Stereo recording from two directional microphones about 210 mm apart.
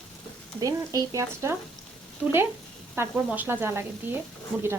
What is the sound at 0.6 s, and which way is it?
Frying, 15° right (ahead or behind).